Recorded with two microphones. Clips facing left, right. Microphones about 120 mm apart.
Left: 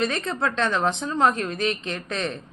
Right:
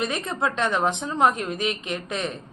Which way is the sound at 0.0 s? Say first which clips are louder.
Left 1 dB; 15° right (ahead or behind).